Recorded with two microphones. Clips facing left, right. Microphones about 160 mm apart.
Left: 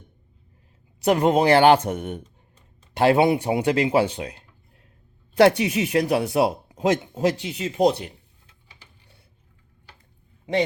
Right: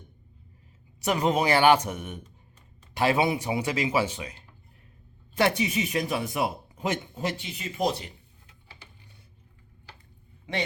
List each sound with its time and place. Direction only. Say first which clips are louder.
1.0 s speech: left 6 dB; 55° left (ahead or behind)
5.4 s a man's voice: left 8 dB; 75° left (ahead or behind)